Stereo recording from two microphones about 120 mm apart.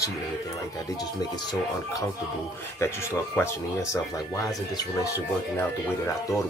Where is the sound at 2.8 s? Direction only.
20° left (ahead or behind).